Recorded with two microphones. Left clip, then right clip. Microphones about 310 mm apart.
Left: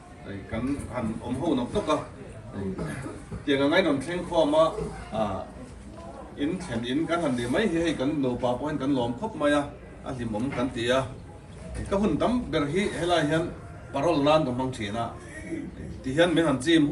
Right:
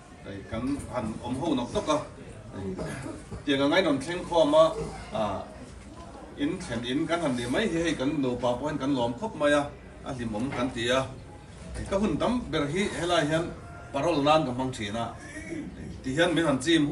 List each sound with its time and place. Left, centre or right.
0.5 s speech: centre
3.4 s speech: centre
6.4 s speech: centre